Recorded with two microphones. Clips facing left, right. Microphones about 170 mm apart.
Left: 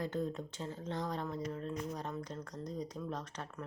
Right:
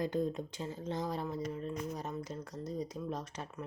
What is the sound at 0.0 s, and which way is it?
A woman's voice, 15° right (ahead or behind).